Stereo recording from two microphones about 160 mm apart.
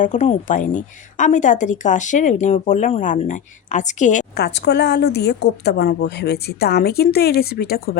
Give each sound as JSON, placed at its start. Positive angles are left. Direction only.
{"t": 0.0, "sound": "speech", "side_deg": 50}
{"t": 4.4, "sound": "a woman's voice", "side_deg": 90}